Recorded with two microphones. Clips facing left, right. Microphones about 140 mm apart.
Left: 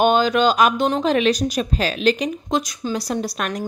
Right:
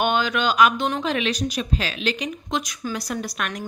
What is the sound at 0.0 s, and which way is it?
Speech, 35° left (ahead or behind).